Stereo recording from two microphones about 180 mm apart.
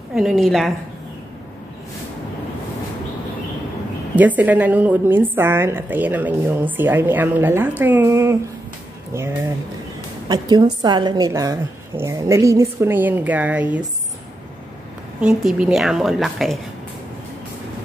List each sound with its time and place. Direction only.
0.1 s a woman's voice: centre (ahead or behind)
4.1 s a woman's voice: 10° right (ahead or behind)
10.2 s a woman's voice: 20° right (ahead or behind)
15.1 s a woman's voice: 5° right (ahead or behind)